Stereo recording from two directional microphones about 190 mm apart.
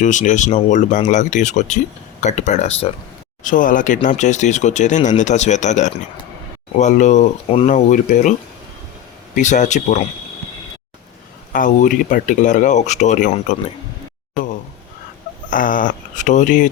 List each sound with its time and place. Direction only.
0.0 s speech: 40° left (ahead or behind)
9.3 s speech: 40° left (ahead or behind)
11.5 s speech: 45° left (ahead or behind)
15.4 s speech: 45° left (ahead or behind)